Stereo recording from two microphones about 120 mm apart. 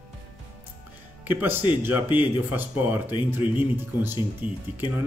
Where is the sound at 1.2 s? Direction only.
15° right (ahead or behind).